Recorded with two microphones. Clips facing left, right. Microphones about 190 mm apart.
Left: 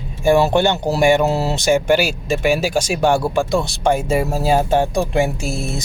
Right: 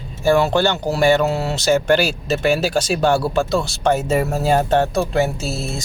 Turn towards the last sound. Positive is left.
turn(degrees=15)  # may be behind; listen again after turning